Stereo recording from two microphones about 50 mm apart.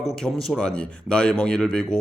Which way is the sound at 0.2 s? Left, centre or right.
Centre.